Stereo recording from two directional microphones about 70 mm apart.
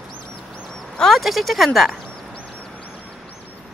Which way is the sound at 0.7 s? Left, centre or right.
Centre.